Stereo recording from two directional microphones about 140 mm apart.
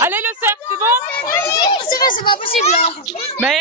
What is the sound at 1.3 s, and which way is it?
A child's voice, 20° left (ahead or behind).